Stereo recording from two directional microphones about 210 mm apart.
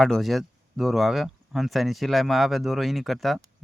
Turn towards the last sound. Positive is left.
turn(degrees=0)  # may be behind; listen again after turning